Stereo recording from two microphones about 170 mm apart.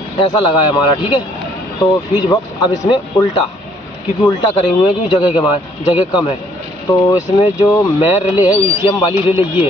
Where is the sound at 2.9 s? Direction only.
30° left (ahead or behind).